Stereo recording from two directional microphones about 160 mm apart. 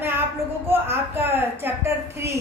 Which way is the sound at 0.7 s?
15° right (ahead or behind).